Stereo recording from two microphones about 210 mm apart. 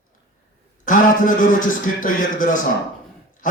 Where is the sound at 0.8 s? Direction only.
40° left (ahead or behind).